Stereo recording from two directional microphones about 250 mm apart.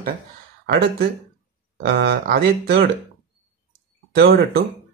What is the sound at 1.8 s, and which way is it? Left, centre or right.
Speech, right.